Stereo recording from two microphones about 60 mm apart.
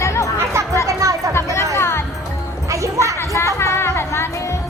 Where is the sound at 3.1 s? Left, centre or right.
Left.